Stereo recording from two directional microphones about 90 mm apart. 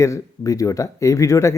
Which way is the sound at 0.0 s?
35° left (ahead or behind).